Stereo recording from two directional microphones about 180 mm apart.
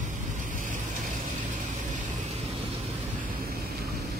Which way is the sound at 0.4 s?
45° right (ahead or behind).